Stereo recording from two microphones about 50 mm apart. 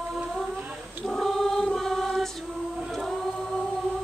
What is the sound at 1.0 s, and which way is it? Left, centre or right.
Choir, centre.